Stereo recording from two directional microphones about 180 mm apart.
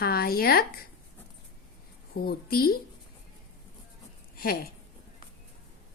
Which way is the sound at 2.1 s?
60° left (ahead or behind).